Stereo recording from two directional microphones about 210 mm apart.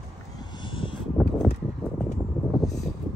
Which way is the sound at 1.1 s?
Centre (ahead or behind).